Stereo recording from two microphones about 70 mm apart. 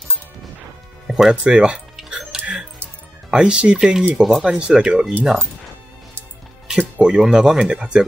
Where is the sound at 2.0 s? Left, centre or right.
Centre.